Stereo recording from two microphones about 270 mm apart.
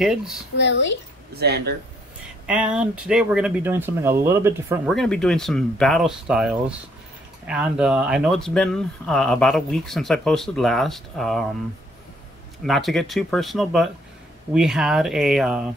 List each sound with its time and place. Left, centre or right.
0.0 s speech: centre
0.6 s speech: left
1.3 s speech: right
2.4 s speech: centre
4.9 s speech: centre
12.6 s speech: centre